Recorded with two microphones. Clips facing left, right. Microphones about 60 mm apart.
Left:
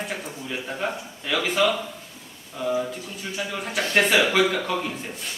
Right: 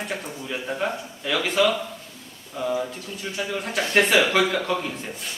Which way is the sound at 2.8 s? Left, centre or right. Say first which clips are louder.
Left 1 dB; centre.